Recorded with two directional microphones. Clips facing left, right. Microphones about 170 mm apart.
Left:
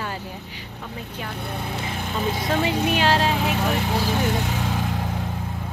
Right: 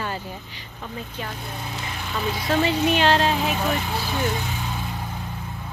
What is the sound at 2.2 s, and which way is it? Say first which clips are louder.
Speech: even; 25° left (ahead or behind).